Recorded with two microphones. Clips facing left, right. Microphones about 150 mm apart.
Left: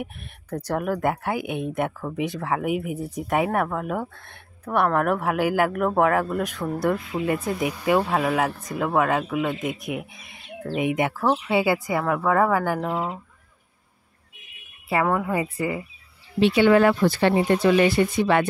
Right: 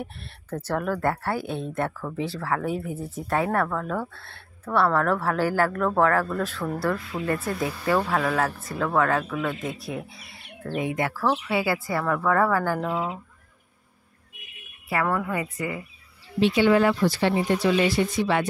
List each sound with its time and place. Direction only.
0.0 s speech: 15° left (ahead or behind)
14.9 s a woman's voice: 20° left (ahead or behind)
16.3 s speech: 65° left (ahead or behind)